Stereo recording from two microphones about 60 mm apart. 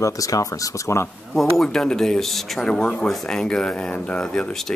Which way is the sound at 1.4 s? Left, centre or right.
Centre.